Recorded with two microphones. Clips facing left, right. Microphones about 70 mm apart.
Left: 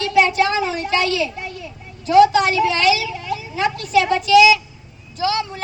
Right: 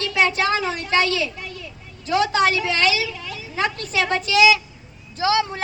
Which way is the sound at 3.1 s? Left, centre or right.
Centre.